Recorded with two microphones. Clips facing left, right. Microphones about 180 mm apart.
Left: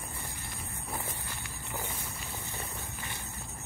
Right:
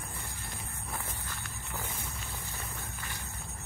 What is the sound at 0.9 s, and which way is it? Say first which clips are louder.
Walk: left 2 dB; 20° left (ahead or behind).